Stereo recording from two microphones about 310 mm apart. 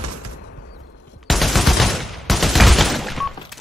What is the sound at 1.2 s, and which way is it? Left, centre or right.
Fusillade, centre.